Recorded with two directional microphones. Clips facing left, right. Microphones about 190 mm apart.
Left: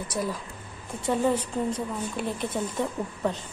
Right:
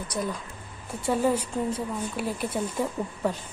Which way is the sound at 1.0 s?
10° right (ahead or behind).